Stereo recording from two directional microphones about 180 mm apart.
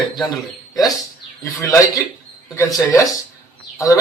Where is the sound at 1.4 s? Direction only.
15° left (ahead or behind).